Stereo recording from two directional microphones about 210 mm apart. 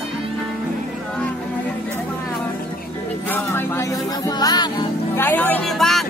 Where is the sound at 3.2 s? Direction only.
10° left (ahead or behind).